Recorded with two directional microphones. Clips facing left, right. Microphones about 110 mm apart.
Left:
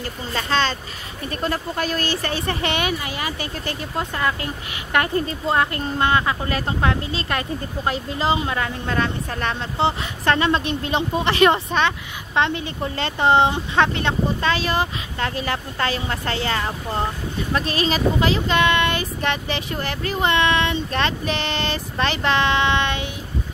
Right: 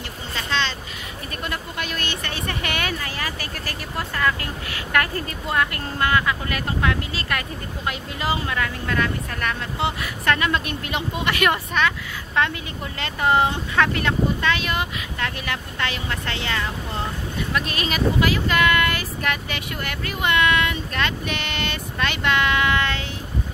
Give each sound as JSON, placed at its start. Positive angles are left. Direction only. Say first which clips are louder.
{"t": 0.3, "sound": "speech", "louder": "left 4 dB", "side_deg": 40}